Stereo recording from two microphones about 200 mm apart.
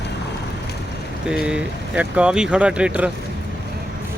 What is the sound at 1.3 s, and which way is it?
Speech, 5° right (ahead or behind).